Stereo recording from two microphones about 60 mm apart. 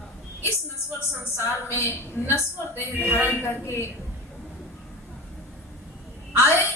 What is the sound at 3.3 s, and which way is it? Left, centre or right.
Speech, left.